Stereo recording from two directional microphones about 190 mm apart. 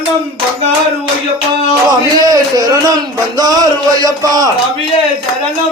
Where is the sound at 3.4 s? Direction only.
20° right (ahead or behind).